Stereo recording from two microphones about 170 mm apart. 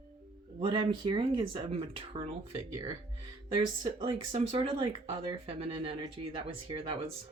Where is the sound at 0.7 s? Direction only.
30° right (ahead or behind).